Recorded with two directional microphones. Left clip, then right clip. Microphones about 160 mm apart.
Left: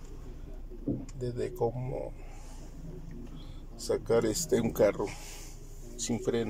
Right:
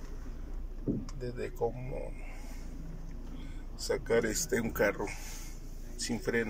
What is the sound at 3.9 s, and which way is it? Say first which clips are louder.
Speech: left 2 dB; 25° left (ahead or behind).